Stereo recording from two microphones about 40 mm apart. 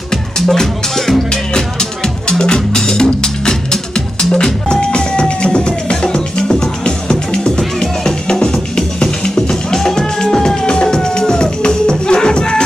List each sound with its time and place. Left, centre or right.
0.1 s music: centre
1.3 s music: centre